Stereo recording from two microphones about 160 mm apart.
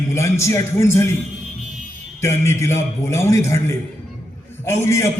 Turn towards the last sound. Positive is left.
turn(degrees=15)  # may be behind; listen again after turning